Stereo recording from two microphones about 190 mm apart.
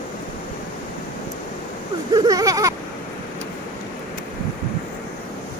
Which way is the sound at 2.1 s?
20° right (ahead or behind).